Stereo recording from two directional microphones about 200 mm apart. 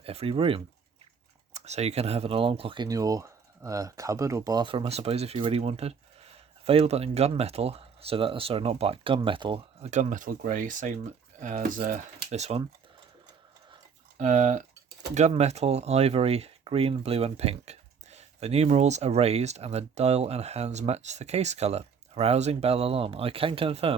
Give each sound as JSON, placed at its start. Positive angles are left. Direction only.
{"t": 0.0, "sound": "speech", "side_deg": -30}
{"t": 14.2, "sound": "speech", "side_deg": -40}